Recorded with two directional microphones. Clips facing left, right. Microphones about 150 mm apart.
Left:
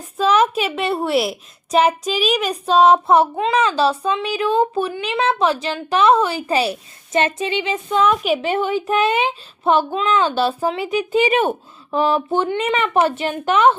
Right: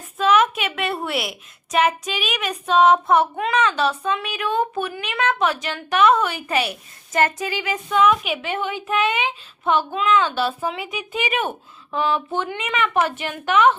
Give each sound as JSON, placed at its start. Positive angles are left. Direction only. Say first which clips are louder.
{"t": 0.0, "sound": "a woman's voice", "louder": "left 2 dB", "side_deg": 35}